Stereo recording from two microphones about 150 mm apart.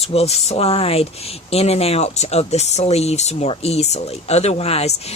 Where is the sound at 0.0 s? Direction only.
40° left (ahead or behind).